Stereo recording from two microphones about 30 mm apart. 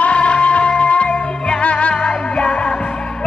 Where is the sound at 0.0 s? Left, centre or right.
Left.